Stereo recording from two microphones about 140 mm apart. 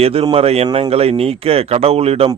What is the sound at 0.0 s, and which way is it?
Speech, 45° right (ahead or behind).